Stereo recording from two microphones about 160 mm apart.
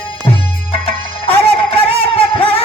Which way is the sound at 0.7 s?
35° left (ahead or behind).